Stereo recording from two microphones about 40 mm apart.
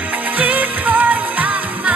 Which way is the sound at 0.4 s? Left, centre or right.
Right.